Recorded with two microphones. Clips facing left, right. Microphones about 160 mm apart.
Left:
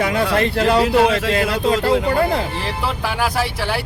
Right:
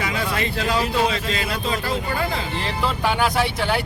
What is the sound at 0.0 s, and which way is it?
Speech, 60° left (ahead or behind).